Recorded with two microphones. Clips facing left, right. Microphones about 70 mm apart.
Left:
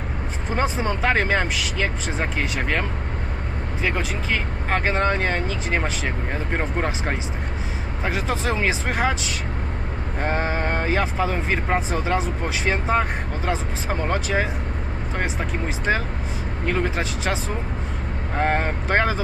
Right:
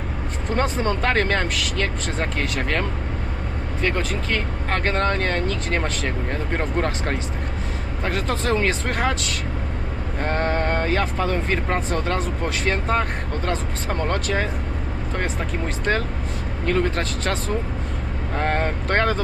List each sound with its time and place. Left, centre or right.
0.5 s speech: centre